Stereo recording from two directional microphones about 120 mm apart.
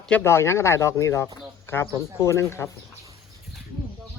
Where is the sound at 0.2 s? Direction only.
20° left (ahead or behind).